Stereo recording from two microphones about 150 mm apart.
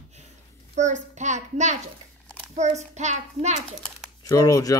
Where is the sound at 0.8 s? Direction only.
50° right (ahead or behind).